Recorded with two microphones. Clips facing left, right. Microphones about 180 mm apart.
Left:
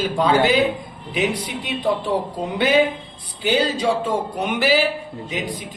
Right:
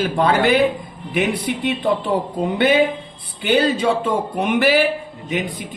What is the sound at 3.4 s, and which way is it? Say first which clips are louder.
Speech: right 3 dB; 60° right (ahead or behind).